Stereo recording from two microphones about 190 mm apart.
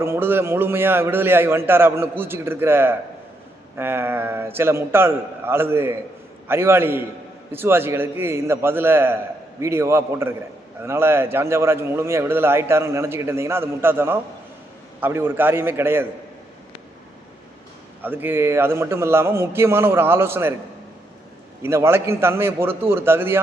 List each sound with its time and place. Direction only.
0.0 s a man's voice: 10° right (ahead or behind)
18.0 s a man's voice: 10° right (ahead or behind)
21.7 s a man's voice: 15° right (ahead or behind)